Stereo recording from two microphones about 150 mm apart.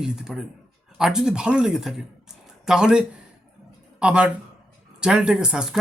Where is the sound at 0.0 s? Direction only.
5° right (ahead or behind).